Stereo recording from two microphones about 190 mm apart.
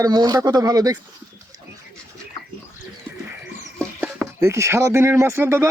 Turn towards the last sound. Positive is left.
turn(degrees=-10)  # may be behind; listen again after turning